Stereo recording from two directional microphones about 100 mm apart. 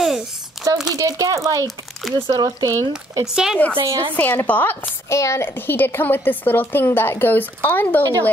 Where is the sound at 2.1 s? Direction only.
55° right (ahead or behind).